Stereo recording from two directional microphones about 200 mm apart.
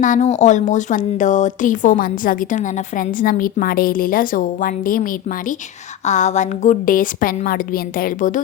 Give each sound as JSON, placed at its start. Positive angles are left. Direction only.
{"t": 0.0, "sound": "a woman's voice", "side_deg": 35}
{"t": 6.1, "sound": "a woman's voice", "side_deg": 35}